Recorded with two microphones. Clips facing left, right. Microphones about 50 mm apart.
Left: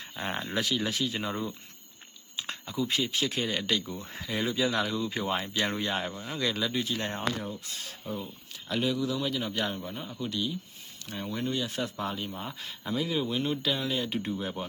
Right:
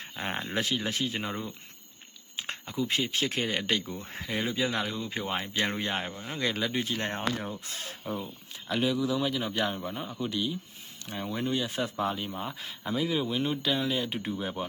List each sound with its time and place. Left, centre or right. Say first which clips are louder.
0.0 s speech: even; right
1.2 s speech: left 2 dB; centre
2.5 s speech: even; right
4.4 s speech: left 3 dB; right
6.1 s speech: left 1 dB; centre
6.3 s speech: even; right
8.2 s speech: right 1 dB; centre